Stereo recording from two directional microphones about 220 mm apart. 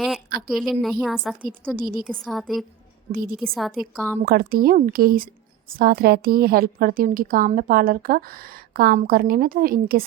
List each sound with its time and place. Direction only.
0.3 s a sound: 45° right (ahead or behind)
0.5 s a woman's voice: centre (ahead or behind)
1.7 s a woman's voice: 40° right (ahead or behind)
2.0 s a woman's voice: centre (ahead or behind)
3.1 s a woman's voice: 40° right (ahead or behind)
3.3 s a woman's voice: centre (ahead or behind)
4.3 s a woman's voice: 40° right (ahead or behind)